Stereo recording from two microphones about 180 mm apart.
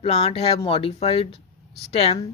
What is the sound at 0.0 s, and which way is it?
A woman's voice, 35° left (ahead or behind).